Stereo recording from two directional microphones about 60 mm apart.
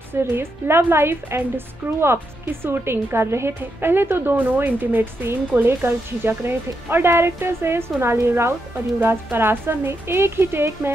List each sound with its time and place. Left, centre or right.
0.1 s a woman's voice: right
1.8 s speech: right
2.6 s a woman's voice: right